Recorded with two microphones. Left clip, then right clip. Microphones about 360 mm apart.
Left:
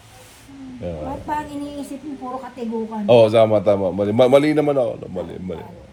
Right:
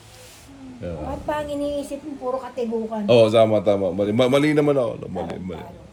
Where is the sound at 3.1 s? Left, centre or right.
Centre.